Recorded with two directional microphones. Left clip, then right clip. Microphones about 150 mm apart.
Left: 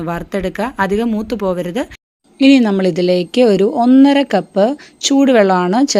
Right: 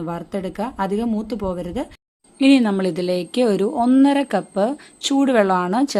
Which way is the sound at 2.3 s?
35° left (ahead or behind).